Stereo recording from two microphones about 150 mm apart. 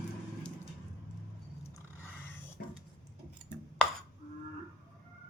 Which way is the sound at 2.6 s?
90° left.